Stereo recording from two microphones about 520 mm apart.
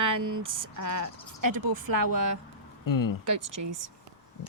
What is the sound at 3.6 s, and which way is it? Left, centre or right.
Speech, right.